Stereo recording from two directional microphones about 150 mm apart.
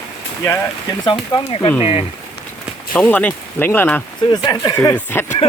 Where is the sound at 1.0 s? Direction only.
30° left (ahead or behind).